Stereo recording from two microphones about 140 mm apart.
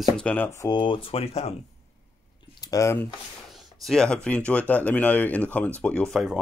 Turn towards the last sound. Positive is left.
turn(degrees=0)  # may be behind; listen again after turning